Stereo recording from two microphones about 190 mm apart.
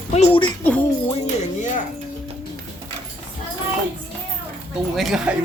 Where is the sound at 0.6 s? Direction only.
5° left (ahead or behind).